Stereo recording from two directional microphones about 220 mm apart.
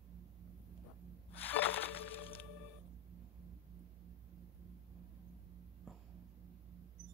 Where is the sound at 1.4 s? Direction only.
10° left (ahead or behind).